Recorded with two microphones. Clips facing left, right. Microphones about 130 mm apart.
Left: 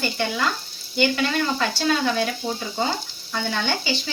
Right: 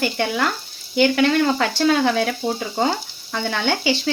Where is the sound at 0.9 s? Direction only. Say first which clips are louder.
Right 6 dB; 65° right (ahead or behind).